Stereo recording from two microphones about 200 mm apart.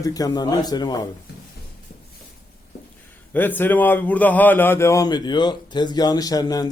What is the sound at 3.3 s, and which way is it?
A man's voice, 10° left (ahead or behind).